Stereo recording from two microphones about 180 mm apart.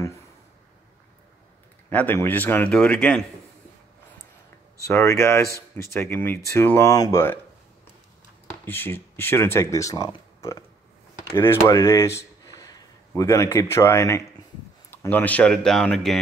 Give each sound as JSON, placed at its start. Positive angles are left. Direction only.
{"t": 1.9, "sound": "speech", "side_deg": 10}
{"t": 4.8, "sound": "speech", "side_deg": 15}
{"t": 8.6, "sound": "speech", "side_deg": 10}